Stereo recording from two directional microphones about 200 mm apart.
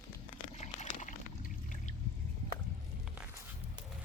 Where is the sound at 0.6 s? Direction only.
35° left (ahead or behind).